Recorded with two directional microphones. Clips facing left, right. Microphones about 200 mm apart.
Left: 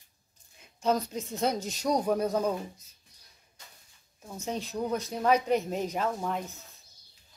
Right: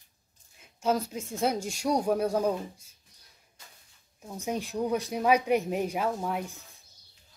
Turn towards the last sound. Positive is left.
turn(degrees=-10)  # may be behind; listen again after turning